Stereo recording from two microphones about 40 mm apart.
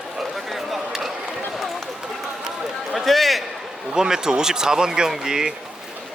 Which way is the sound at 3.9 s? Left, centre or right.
Centre.